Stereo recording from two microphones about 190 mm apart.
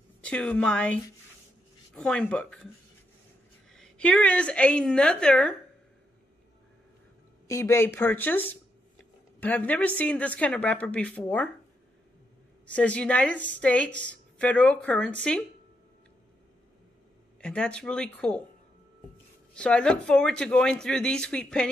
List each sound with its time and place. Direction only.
0.2 s a woman's voice: 5° left (ahead or behind)
2.0 s speech: 5° left (ahead or behind)
3.7 s speech: 5° left (ahead or behind)
7.4 s a woman's voice: 15° left (ahead or behind)
12.6 s a woman's voice: 5° left (ahead or behind)
17.4 s speech: 5° left (ahead or behind)
19.5 s speech: 5° left (ahead or behind)